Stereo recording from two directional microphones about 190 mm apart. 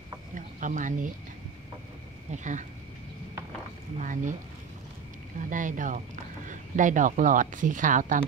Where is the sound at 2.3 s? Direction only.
40° right (ahead or behind).